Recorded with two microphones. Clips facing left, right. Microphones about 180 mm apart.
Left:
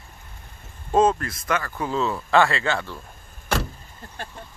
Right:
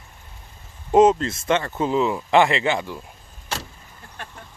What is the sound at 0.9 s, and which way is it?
Speech, 20° right (ahead or behind).